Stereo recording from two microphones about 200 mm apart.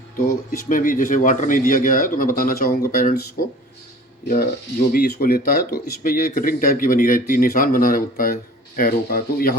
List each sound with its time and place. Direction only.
0.3 s speech: 40° left (ahead or behind)
4.9 s speech: 50° left (ahead or behind)